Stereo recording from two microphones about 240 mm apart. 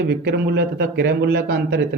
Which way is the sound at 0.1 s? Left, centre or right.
Right.